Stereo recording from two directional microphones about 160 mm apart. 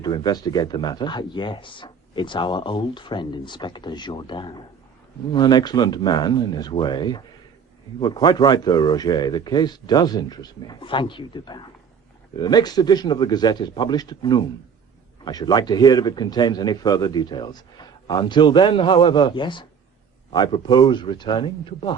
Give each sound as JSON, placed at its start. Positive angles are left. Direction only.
{"t": 0.0, "sound": "speech", "side_deg": 25}